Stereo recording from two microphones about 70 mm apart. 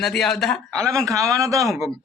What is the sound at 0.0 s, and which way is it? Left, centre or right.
Speech, centre.